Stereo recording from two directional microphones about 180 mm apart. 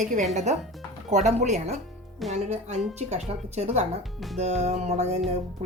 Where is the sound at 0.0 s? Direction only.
45° right (ahead or behind).